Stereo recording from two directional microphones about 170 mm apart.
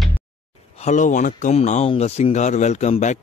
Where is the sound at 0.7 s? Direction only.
40° left (ahead or behind).